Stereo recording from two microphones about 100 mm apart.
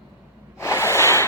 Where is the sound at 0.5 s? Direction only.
25° left (ahead or behind).